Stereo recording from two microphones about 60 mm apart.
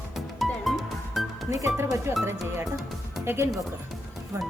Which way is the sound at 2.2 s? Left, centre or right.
Right.